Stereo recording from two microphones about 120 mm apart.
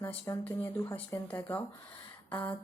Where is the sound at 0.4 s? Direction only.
15° left (ahead or behind).